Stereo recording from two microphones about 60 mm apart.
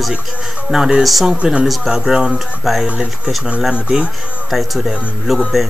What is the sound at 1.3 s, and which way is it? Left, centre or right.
Speech, centre.